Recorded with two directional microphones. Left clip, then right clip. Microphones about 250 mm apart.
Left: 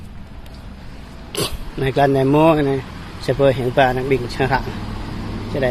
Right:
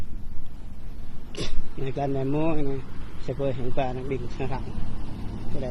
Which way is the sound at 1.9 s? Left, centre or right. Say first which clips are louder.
Left 13 dB; centre.